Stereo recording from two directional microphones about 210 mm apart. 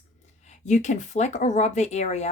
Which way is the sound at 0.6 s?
35° left (ahead or behind).